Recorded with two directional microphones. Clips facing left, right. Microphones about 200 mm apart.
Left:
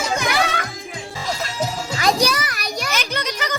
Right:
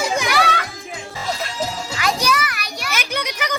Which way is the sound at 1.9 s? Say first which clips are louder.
Left 2 dB; 35° left (ahead or behind).